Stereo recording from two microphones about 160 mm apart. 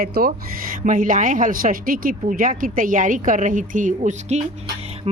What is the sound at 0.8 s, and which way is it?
A woman's voice, 55° right (ahead or behind).